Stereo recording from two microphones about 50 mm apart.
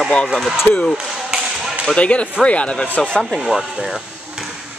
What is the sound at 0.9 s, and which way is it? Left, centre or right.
Basketball bounce, centre.